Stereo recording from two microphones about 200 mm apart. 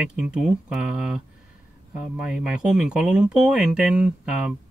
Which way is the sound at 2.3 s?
Centre (ahead or behind).